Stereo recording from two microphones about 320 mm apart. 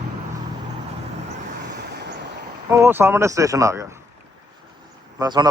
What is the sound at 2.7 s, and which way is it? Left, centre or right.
Speech, centre.